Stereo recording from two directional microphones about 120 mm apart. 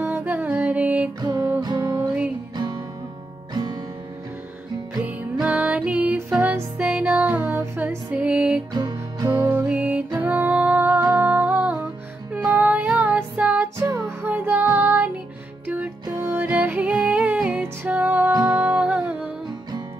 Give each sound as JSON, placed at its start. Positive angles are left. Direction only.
{"t": 0.0, "sound": "music", "side_deg": -15}
{"t": 1.2, "sound": "music", "side_deg": -30}
{"t": 5.0, "sound": "music", "side_deg": -10}
{"t": 8.7, "sound": "music", "side_deg": -30}
{"t": 9.7, "sound": "music", "side_deg": -10}
{"t": 13.7, "sound": "music", "side_deg": -25}
{"t": 18.3, "sound": "music", "side_deg": -30}
{"t": 18.6, "sound": "music", "side_deg": -15}